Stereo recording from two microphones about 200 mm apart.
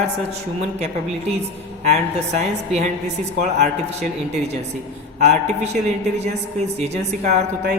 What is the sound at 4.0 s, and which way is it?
A woman's voice, 35° right (ahead or behind).